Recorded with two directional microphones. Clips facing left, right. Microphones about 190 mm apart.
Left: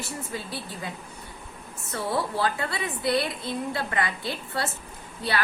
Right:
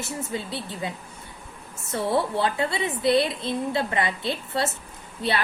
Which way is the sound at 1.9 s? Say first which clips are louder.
Right 4 dB; 25° right (ahead or behind).